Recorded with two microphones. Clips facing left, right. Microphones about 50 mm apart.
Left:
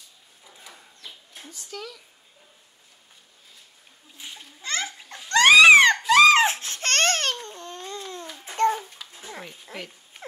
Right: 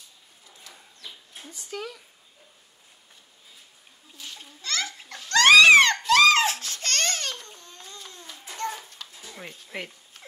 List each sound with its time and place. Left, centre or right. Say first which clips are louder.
0.5 s bird: left 2 dB; centre
1.5 s speech: right 3 dB; centre
4.2 s a sound: left 1 dB; left
6.4 s baby cry: left 3 dB; left
7.4 s babbling: left 9 dB; left
8.5 s child singing: left 10 dB; left
9.0 s dog: even; centre